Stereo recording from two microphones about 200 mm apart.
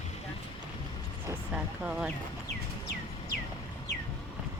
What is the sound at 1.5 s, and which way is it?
Vehicle, 5° right (ahead or behind).